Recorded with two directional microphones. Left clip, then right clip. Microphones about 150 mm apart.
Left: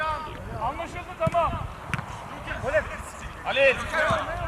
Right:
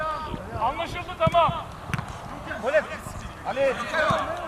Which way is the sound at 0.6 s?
30° right (ahead or behind).